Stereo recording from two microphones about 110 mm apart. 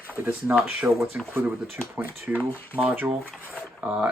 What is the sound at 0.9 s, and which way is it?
Speech, centre (ahead or behind).